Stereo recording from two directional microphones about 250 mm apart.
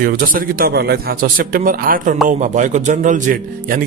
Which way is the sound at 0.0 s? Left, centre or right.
Right.